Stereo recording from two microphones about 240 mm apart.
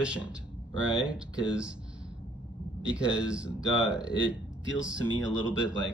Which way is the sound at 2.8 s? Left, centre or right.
Centre.